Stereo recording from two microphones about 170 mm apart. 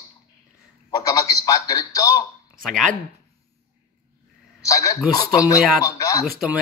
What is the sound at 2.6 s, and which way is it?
Speech, 5° left (ahead or behind).